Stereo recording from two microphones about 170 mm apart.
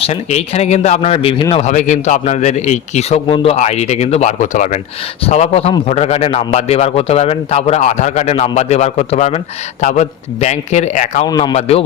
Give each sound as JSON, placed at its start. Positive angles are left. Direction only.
{"t": 0.0, "sound": "a man's voice", "side_deg": 40}
{"t": 1.6, "sound": "a man's voice", "side_deg": 45}
{"t": 5.2, "sound": "a man's voice", "side_deg": 40}
{"t": 11.3, "sound": "a man's voice", "side_deg": 25}
{"t": 11.5, "sound": "a man's voice", "side_deg": 35}